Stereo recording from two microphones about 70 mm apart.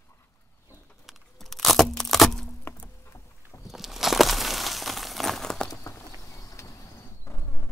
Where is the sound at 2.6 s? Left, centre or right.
Left.